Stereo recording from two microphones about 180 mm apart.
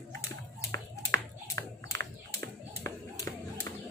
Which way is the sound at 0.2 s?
15° left (ahead or behind).